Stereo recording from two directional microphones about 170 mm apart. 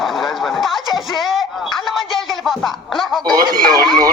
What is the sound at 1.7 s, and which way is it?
Music, centre (ahead or behind).